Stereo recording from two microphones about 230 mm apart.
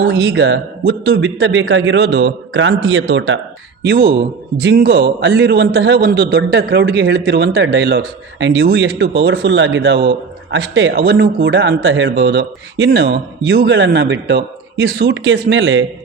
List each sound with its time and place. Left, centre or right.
0.1 s a man's voice: right
3.8 s a man's voice: right